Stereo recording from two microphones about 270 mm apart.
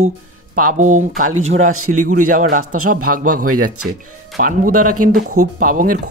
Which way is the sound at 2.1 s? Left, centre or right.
Right.